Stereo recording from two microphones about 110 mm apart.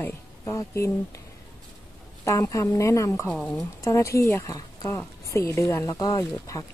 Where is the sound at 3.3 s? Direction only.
10° left (ahead or behind).